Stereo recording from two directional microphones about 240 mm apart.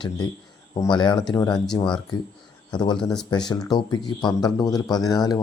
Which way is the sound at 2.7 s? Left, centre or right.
Centre.